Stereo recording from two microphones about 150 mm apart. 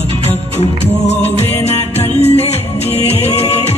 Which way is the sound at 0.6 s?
45° left (ahead or behind).